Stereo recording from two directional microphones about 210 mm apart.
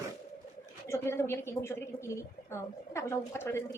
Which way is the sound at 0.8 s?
10° left (ahead or behind).